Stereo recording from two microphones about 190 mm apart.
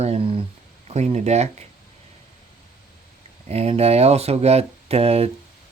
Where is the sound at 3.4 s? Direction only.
35° right (ahead or behind).